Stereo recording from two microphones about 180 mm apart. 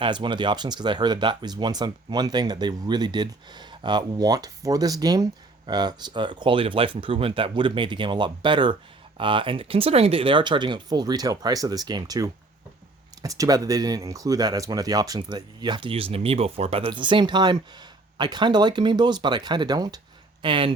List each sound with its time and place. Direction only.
0.0 s speech: 25° right (ahead or behind)